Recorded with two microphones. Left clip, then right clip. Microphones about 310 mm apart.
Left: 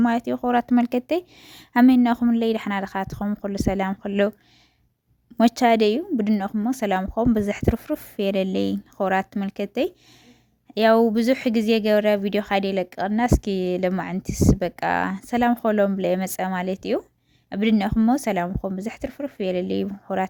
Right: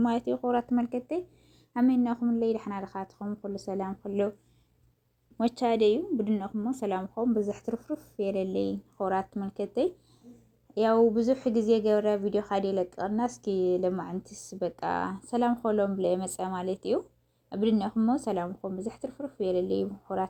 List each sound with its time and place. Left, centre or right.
0.0 s speech: left
3.7 s speech: left
5.6 s speech: left
6.7 s speech: left
9.0 s speech: left
10.8 s speech: left
15.3 s speech: left
18.4 s speech: left
19.0 s speech: left